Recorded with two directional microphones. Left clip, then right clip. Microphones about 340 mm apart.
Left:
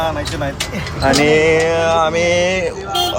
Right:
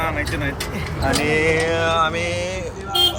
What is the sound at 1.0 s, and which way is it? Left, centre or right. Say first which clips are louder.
Music: left 7 dB; centre.